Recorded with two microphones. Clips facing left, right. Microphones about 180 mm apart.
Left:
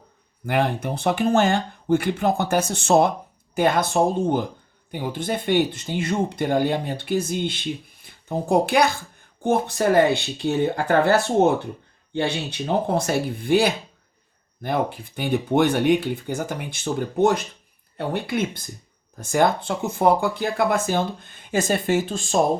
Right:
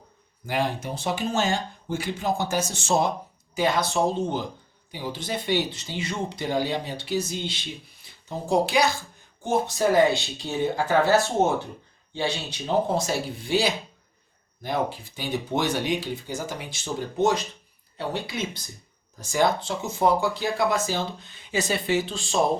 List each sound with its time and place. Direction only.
0.4 s speech: 60° left (ahead or behind)